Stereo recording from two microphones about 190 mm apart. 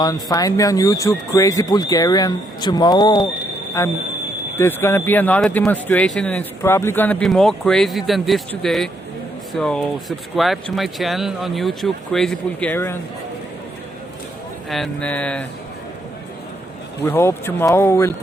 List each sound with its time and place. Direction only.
0.0 s speech: 20° left (ahead or behind)
14.7 s speech: 5° left (ahead or behind)
17.0 s speech: 15° left (ahead or behind)